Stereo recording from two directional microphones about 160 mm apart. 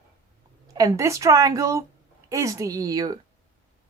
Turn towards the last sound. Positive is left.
turn(degrees=-25)  # may be behind; listen again after turning